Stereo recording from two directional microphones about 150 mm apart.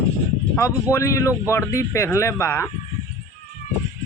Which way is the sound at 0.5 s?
15° left (ahead or behind).